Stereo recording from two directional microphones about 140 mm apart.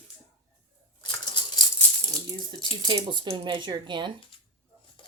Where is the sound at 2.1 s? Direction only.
30° right (ahead or behind).